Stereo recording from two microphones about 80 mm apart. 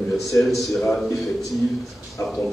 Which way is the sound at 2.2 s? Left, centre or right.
Left.